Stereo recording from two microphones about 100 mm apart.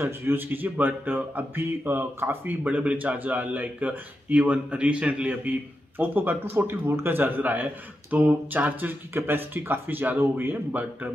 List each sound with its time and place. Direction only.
0.0 s speech: 20° right (ahead or behind)